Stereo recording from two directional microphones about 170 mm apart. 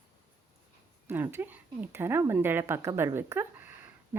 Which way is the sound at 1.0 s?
15° right (ahead or behind).